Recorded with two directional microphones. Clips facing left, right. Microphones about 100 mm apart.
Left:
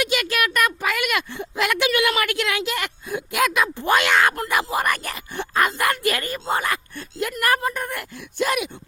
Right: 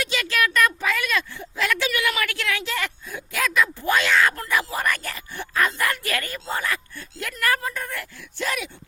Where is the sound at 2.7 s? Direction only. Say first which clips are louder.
Left 2 dB; 60° left (ahead or behind).